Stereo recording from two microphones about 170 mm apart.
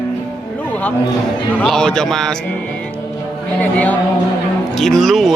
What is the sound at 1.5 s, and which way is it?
Speech, 5° left (ahead or behind).